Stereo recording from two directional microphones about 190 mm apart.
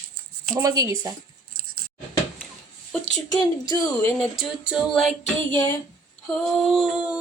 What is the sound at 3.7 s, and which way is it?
Speech, 20° left (ahead or behind).